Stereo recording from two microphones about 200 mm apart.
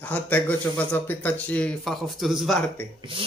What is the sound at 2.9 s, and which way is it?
Speech, 25° right (ahead or behind).